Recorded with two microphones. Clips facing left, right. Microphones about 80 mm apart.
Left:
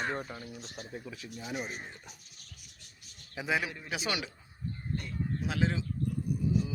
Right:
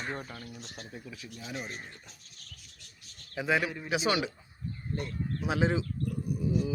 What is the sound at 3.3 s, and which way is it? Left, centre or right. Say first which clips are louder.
Speech: right 3 dB; centre.